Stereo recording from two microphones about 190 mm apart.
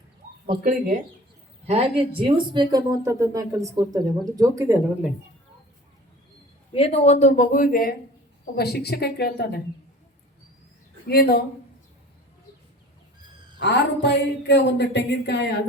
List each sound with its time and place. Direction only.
0.6 s speech: 45° right (ahead or behind)
1.6 s speech: 30° right (ahead or behind); by 4.8 s 15° right (ahead or behind)
6.7 s speech: 30° left (ahead or behind); by 9.6 s 55° left (ahead or behind)
11.1 s speech: 55° left (ahead or behind)
13.6 s speech: 65° left (ahead or behind)